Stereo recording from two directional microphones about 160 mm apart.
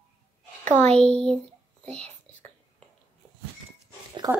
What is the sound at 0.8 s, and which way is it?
Speech, 40° right (ahead or behind).